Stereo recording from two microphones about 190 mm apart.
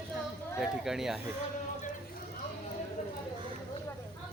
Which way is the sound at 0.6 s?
Centre (ahead or behind).